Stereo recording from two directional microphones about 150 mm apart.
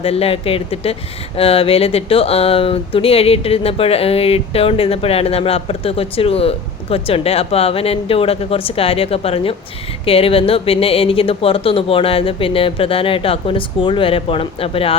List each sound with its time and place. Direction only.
0.0 s speech: 40° left (ahead or behind)